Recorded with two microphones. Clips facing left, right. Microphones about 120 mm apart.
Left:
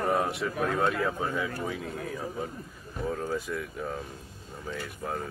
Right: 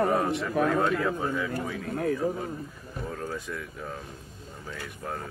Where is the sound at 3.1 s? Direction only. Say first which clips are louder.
Left 4 dB; 5° left (ahead or behind).